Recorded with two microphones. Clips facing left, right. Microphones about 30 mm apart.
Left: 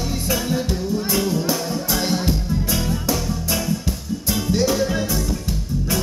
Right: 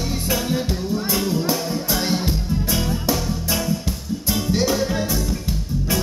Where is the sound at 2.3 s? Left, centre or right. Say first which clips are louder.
Left 1 dB; centre.